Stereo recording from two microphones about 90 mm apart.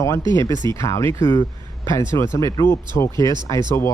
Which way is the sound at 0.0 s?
35° left (ahead or behind).